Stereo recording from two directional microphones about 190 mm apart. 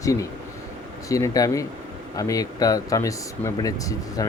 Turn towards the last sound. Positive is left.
turn(degrees=20)  # may be behind; listen again after turning